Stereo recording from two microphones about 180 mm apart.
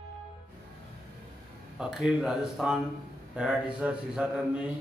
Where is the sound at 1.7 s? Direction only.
5° right (ahead or behind).